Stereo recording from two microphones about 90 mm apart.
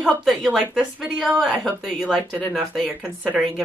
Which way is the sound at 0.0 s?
Centre (ahead or behind).